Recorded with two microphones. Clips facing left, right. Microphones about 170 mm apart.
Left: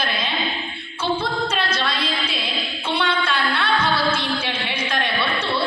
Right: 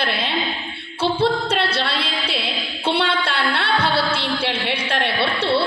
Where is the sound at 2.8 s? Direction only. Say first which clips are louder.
Right 2 dB; 65° right (ahead or behind).